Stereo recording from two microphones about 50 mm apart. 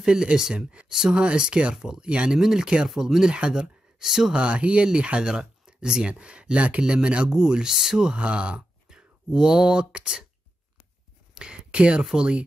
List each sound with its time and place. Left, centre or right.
0.0 s speech: centre
2.3 s speech: centre
3.3 s speech: centre
4.0 s speech: centre
4.4 s speech: right
8.2 s speech: right
11.3 s speech: centre
12.0 s speech: centre